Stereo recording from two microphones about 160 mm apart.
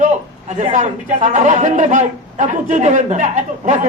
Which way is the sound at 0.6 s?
50° right (ahead or behind).